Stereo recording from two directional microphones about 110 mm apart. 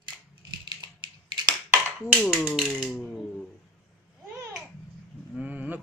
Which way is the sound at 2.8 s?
Centre (ahead or behind).